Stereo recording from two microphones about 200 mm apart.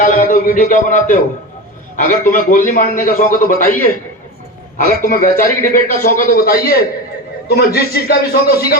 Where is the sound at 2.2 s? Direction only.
40° left (ahead or behind).